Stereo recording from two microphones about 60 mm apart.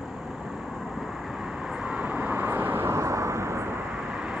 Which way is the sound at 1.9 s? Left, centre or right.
Right.